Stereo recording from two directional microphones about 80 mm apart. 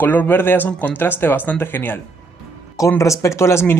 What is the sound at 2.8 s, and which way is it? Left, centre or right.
Speech, left.